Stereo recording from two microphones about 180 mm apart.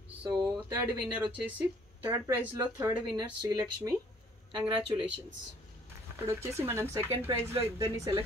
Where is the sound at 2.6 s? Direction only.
20° right (ahead or behind).